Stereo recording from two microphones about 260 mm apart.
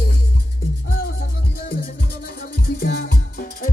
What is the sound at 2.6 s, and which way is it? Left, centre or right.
Music, left.